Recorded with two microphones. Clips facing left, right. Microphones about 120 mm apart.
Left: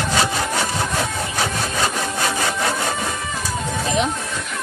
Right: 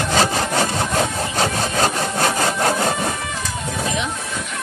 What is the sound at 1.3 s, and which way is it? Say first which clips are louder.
Engine: right 4 dB; 45° right (ahead or behind).